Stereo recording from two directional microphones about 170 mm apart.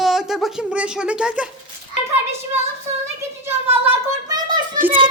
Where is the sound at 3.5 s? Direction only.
15° right (ahead or behind).